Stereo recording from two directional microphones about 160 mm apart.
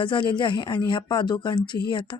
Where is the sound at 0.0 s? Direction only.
30° left (ahead or behind).